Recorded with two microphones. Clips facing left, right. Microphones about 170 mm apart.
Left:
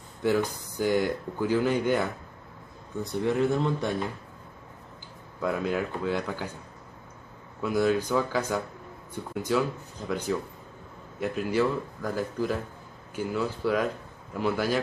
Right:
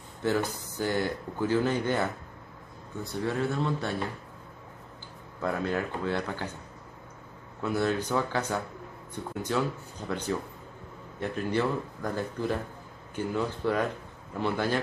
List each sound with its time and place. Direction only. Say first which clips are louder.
0.2 s speech: left 3 dB; 15° left (ahead or behind)
5.4 s speech: left 2 dB; 10° left (ahead or behind)
7.6 s speech: left 3 dB; 10° left (ahead or behind)